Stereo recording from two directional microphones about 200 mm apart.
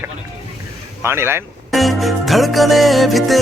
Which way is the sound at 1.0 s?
10° right (ahead or behind).